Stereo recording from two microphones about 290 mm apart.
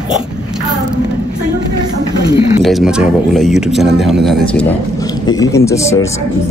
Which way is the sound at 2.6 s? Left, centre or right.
Centre.